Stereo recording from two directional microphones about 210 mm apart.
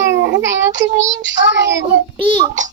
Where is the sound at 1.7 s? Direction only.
20° right (ahead or behind).